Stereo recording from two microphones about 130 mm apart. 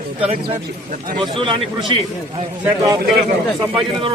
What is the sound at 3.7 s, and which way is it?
Speech, 45° right (ahead or behind).